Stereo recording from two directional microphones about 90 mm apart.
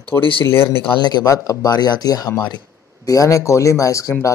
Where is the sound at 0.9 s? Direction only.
50° left (ahead or behind).